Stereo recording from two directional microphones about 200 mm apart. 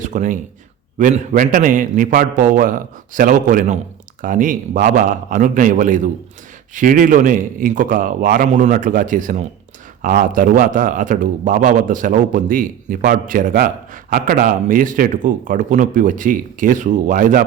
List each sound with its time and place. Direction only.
0.0 s a man's voice: 40° right (ahead or behind)